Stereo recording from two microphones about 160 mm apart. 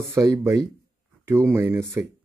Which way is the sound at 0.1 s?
15° right (ahead or behind).